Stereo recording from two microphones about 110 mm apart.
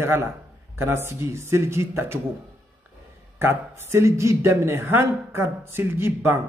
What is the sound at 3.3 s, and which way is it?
Speech, 25° right (ahead or behind).